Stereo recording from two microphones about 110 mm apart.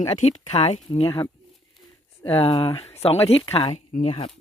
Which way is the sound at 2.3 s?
55° left (ahead or behind).